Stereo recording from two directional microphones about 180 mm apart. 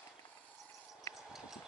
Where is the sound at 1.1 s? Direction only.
Centre (ahead or behind).